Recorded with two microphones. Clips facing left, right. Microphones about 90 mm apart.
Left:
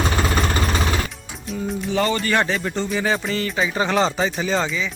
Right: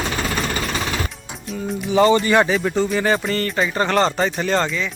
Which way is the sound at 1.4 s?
Centre (ahead or behind).